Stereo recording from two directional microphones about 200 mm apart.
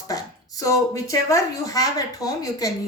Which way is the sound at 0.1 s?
15° left (ahead or behind).